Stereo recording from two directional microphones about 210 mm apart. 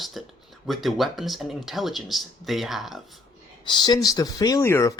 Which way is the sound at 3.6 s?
20° left (ahead or behind).